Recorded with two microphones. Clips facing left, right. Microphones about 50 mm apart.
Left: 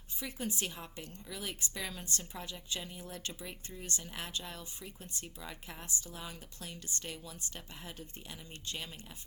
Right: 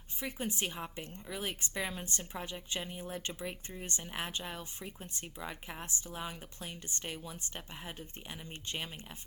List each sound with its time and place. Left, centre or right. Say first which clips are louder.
0.2 s a woman's voice: right 2 dB; right